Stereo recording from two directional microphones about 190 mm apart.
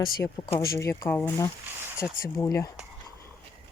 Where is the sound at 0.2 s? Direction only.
15° left (ahead or behind).